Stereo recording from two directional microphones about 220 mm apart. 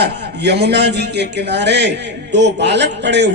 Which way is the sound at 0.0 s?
50° right (ahead or behind).